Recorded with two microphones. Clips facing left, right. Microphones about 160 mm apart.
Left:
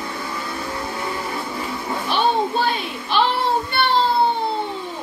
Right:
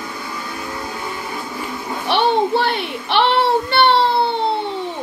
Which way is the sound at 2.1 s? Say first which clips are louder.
Right 4 dB; 70° right (ahead or behind).